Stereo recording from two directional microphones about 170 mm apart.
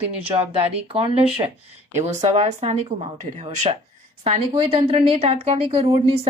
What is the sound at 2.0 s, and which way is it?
Speech, 40° right (ahead or behind).